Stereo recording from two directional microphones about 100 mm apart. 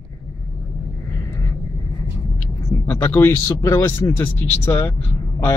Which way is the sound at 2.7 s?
25° left (ahead or behind).